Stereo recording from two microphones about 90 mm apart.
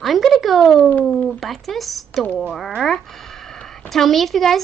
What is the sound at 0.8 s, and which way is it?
Speech, 20° left (ahead or behind).